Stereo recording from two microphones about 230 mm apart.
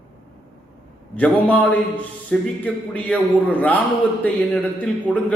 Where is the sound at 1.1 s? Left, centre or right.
Centre.